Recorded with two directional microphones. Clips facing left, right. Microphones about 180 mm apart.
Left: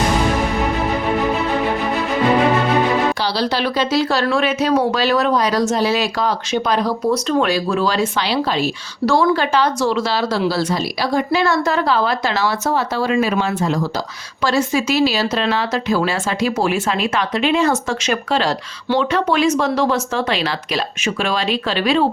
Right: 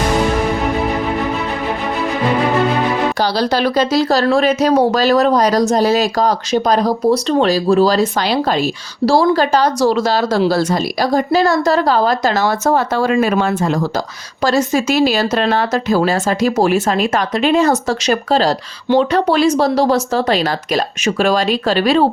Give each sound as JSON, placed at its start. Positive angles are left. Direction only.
{"t": 3.2, "sound": "speech", "side_deg": -45}